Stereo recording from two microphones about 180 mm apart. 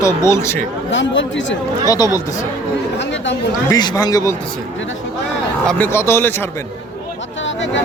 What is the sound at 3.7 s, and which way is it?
Speech, 20° left (ahead or behind).